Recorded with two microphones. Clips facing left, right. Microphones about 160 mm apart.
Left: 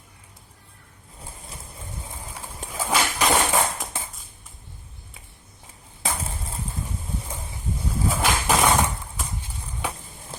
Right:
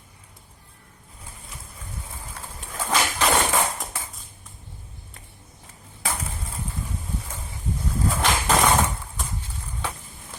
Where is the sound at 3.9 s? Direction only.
20° left (ahead or behind).